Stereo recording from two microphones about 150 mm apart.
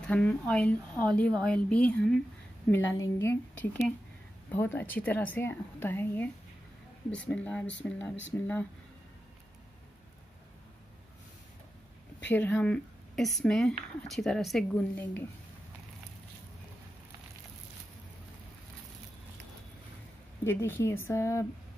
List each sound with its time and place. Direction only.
0.0 s a woman's voice: 10° left (ahead or behind)
2.7 s a woman's voice: 20° left (ahead or behind)
12.4 s speech: 10° left (ahead or behind)
20.4 s a woman's voice: 15° left (ahead or behind)